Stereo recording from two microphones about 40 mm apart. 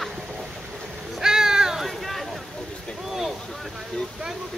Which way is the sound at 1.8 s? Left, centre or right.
Centre.